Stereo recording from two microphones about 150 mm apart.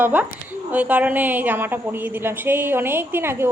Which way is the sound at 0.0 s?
10° right (ahead or behind).